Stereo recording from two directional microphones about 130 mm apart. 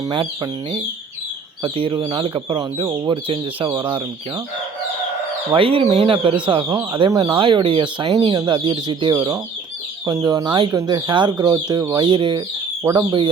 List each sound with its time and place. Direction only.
0.0 s speech: 35° right (ahead or behind)
1.6 s speech: 40° right (ahead or behind)
5.5 s speech: 45° right (ahead or behind)
6.7 s speech: 25° right (ahead or behind)
8.1 s speech: 25° right (ahead or behind)